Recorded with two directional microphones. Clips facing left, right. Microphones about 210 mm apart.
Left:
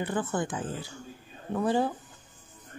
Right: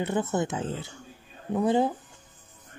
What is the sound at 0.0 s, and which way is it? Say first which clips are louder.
Speech: right 3 dB; 20° right (ahead or behind).